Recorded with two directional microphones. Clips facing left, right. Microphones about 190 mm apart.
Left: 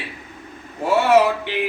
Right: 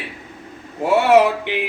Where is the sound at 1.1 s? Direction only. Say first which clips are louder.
Right 2 dB; 15° right (ahead or behind).